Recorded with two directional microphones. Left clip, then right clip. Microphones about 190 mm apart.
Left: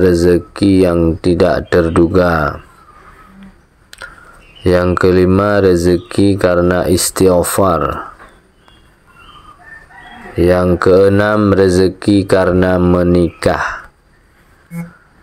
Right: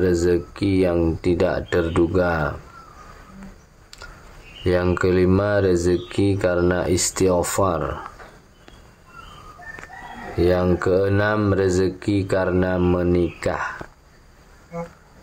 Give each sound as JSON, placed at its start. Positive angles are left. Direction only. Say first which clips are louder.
{"t": 0.0, "sound": "speech", "louder": "left 9 dB", "side_deg": 30}
{"t": 4.9, "sound": "speech", "louder": "left 8 dB", "side_deg": 30}
{"t": 10.3, "sound": "speech", "louder": "left 8 dB", "side_deg": 30}